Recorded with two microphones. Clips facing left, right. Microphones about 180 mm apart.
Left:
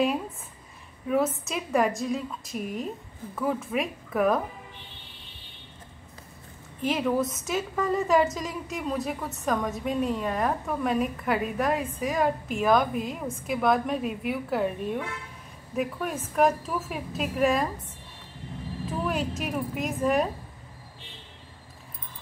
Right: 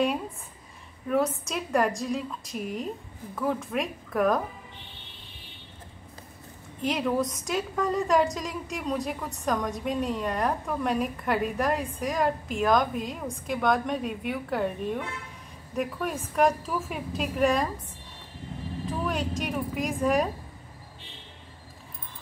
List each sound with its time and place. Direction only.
1.0 s a woman's voice: centre (ahead or behind)
6.8 s a woman's voice: 5° left (ahead or behind)
18.9 s speech: 5° left (ahead or behind)